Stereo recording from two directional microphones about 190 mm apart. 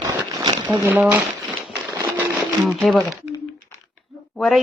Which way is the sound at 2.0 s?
20° right (ahead or behind).